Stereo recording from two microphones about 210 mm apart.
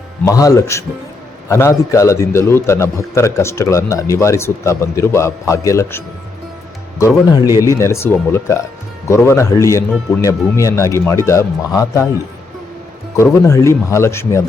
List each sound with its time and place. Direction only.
0.3 s a man's voice: 15° left (ahead or behind)
7.0 s a man's voice: 20° left (ahead or behind)
13.1 s a man's voice: 15° left (ahead or behind)